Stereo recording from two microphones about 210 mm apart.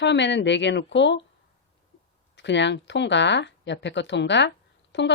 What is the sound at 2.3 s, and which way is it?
Speech, 55° left (ahead or behind).